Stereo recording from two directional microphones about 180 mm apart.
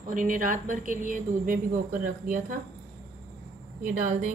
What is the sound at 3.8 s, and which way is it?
Speech, 50° right (ahead or behind).